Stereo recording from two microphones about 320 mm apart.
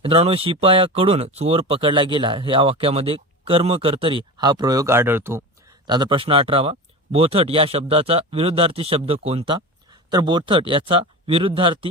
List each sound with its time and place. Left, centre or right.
0.0 s speech: centre